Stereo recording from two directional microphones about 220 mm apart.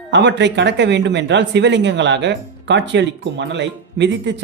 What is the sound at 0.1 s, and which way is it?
Speech, 55° right (ahead or behind).